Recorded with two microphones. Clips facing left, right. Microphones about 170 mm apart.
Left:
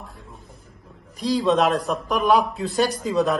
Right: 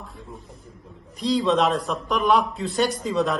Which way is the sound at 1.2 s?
Centre (ahead or behind).